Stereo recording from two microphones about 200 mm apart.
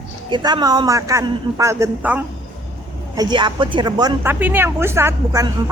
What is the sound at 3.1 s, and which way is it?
A woman's voice, 20° right (ahead or behind).